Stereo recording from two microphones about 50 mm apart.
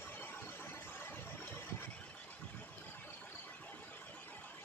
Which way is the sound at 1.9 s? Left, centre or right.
Left.